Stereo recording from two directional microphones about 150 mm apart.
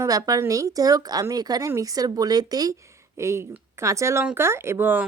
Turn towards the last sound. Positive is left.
turn(degrees=-15)  # may be behind; listen again after turning